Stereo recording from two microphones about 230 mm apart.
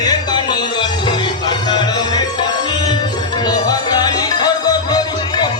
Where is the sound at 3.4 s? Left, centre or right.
Centre.